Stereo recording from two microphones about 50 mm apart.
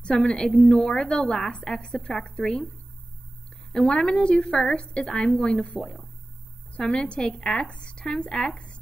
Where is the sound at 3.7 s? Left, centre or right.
Centre.